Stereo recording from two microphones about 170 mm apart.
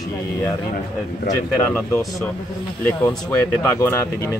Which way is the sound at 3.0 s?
10° left (ahead or behind).